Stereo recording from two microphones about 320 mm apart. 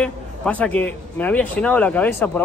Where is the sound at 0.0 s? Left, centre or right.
Centre.